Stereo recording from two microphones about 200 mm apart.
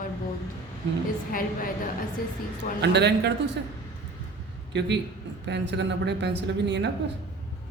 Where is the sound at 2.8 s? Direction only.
60° right (ahead or behind).